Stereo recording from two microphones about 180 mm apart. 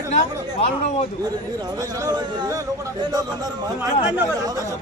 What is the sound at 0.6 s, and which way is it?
Speech, 35° left (ahead or behind).